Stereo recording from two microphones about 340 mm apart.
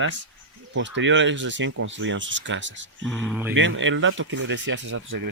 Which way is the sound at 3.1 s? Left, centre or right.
Centre.